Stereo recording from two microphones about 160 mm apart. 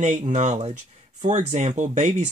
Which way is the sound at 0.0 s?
45° right (ahead or behind).